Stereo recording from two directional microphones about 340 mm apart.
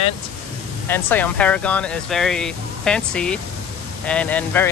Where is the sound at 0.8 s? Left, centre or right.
Centre.